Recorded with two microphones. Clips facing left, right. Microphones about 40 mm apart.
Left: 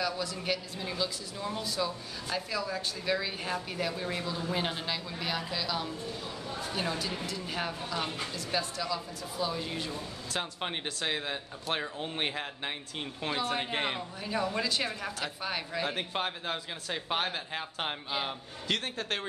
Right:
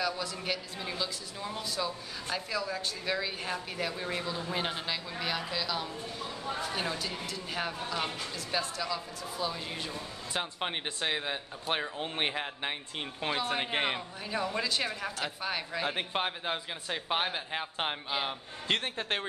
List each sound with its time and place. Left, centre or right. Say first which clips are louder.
0.0 s speech: even; centre
15.9 s speech: right 1 dB; centre
18.7 s a man's voice: right 1 dB; right